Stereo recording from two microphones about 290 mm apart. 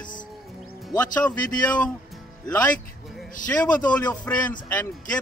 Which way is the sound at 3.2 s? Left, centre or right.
Centre.